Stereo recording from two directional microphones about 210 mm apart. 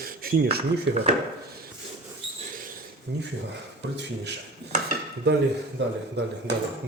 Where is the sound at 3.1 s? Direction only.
55° right (ahead or behind).